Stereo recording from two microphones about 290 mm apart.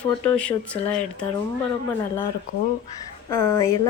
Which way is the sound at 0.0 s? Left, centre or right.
Centre.